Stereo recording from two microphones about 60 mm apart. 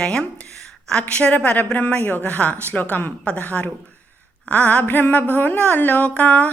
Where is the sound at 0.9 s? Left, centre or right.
Centre.